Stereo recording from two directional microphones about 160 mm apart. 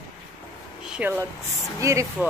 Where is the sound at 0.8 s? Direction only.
10° right (ahead or behind).